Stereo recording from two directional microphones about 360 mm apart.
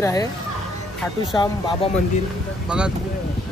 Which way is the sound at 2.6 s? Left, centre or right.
Centre.